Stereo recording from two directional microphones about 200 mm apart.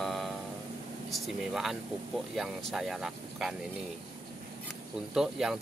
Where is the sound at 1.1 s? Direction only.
Centre (ahead or behind).